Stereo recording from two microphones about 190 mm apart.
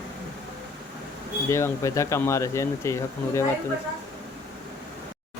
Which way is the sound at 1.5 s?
15° left (ahead or behind).